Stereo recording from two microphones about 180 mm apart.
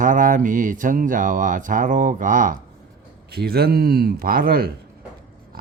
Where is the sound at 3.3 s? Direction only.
60° right (ahead or behind).